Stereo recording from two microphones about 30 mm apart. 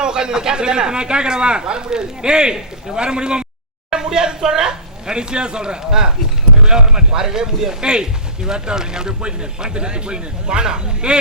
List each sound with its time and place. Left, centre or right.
0.0 s speech: right